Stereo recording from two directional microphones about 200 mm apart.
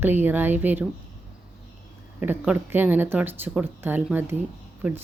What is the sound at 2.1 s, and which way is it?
Speech, 10° right (ahead or behind).